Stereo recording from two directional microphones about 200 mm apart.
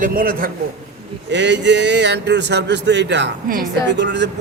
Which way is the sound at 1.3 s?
60° right (ahead or behind).